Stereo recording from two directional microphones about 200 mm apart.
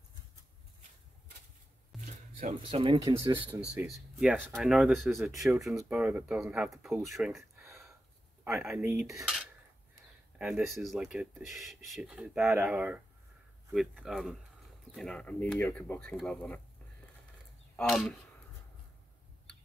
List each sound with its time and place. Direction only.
2.0 s music: 40° right (ahead or behind)
2.7 s speech: 25° right (ahead or behind)
3.7 s speech: 5° right (ahead or behind)
17.7 s speech: centre (ahead or behind)